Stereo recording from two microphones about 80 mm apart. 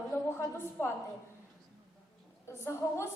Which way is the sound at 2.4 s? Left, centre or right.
Left.